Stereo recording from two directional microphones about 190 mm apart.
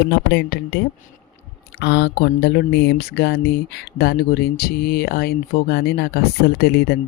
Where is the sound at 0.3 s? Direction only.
65° left (ahead or behind).